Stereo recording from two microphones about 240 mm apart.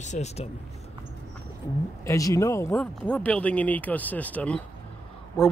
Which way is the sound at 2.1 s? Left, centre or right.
Centre.